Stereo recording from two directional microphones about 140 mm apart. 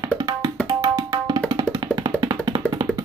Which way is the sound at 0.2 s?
25° right (ahead or behind).